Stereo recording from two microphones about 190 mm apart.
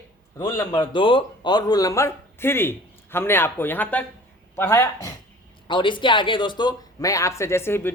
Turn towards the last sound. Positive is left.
turn(degrees=10)  # may be behind; listen again after turning